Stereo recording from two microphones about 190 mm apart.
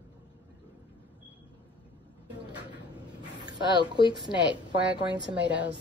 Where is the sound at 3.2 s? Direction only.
20° right (ahead or behind).